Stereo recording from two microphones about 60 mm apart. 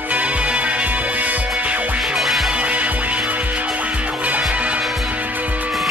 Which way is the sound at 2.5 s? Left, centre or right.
Right.